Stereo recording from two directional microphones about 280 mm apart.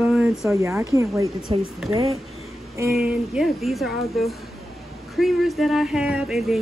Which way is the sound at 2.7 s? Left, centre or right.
Centre.